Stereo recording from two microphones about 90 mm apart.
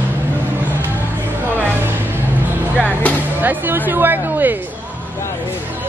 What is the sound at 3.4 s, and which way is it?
Speech, 20° right (ahead or behind).